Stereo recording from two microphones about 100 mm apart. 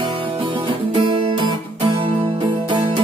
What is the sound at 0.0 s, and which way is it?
Guitar, 60° right (ahead or behind).